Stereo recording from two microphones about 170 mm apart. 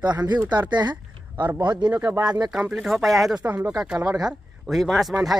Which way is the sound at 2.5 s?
Centre (ahead or behind).